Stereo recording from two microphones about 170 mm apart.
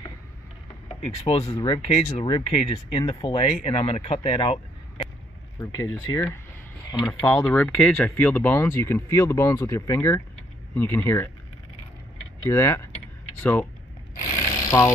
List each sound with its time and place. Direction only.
1.0 s speech: 35° left (ahead or behind)
5.6 s speech: 20° left (ahead or behind)
12.4 s speech: 15° left (ahead or behind)
14.7 s speech: 10° left (ahead or behind)